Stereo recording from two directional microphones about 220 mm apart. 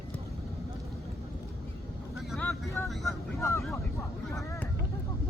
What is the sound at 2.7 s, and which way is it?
Vehicle, 15° left (ahead or behind).